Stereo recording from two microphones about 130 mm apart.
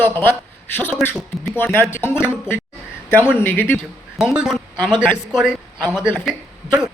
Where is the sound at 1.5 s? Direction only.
15° left (ahead or behind).